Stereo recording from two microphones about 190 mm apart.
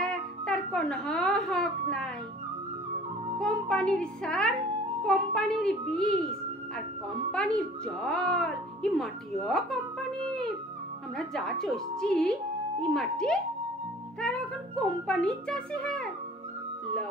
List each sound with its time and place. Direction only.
0.0 s music: 5° left (ahead or behind)
3.3 s a child's voice: 5° left (ahead or behind)
7.3 s a child's voice: 5° left (ahead or behind)